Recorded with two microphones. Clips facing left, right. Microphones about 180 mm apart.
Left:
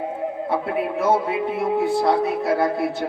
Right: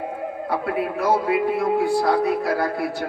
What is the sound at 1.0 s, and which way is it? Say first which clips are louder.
A man's voice: right 2 dB; 25° left (ahead or behind).